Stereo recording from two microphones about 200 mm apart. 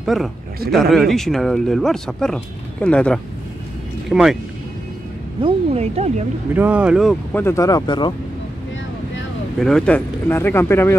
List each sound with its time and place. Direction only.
0.0 s a man's voice: centre (ahead or behind)
5.4 s speech: 30° right (ahead or behind)
6.5 s speech: 5° right (ahead or behind)
7.4 s speech: 15° left (ahead or behind)
9.6 s speech: centre (ahead or behind)